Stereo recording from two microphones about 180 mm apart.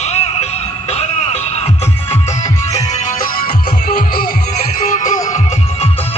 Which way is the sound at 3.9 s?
50° left (ahead or behind).